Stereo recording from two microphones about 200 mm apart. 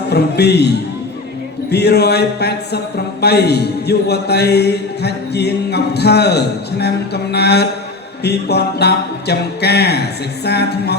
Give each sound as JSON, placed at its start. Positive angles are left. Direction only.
{"t": 0.1, "sound": "speech", "side_deg": 55}
{"t": 1.7, "sound": "speech", "side_deg": 55}